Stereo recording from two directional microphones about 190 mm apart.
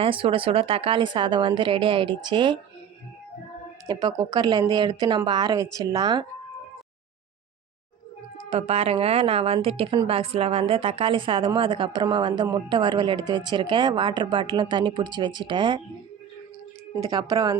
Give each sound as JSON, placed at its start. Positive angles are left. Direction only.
{"t": 0.0, "sound": "a woman's voice", "side_deg": -30}
{"t": 3.8, "sound": "a woman's voice", "side_deg": -20}
{"t": 8.4, "sound": "a woman's voice", "side_deg": -30}
{"t": 16.9, "sound": "a woman's voice", "side_deg": -20}